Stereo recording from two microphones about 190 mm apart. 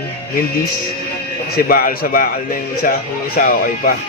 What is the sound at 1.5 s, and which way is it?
Speech, 50° left (ahead or behind).